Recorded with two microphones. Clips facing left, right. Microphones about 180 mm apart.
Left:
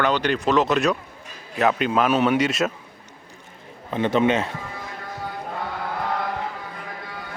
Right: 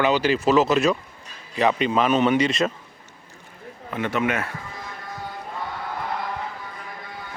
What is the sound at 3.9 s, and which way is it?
Speech, 25° left (ahead or behind).